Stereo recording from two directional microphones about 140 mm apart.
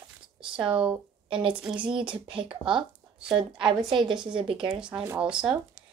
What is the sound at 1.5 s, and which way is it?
Speech, 10° right (ahead or behind).